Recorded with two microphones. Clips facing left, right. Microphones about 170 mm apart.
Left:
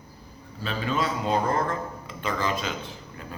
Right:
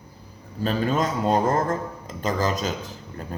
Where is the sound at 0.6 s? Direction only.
45° right (ahead or behind).